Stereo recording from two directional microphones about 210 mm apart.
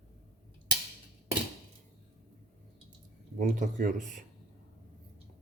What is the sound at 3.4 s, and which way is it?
Speech, 40° right (ahead or behind).